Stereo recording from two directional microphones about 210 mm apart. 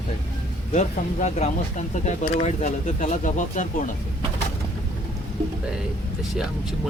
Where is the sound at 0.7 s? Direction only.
35° left (ahead or behind).